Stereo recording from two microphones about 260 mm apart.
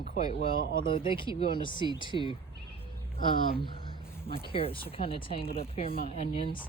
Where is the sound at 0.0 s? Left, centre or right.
Left.